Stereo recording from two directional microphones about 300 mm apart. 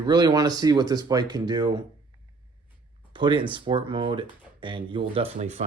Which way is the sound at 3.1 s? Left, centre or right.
Centre.